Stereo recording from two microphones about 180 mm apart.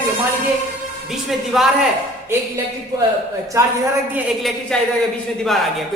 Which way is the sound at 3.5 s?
20° right (ahead or behind).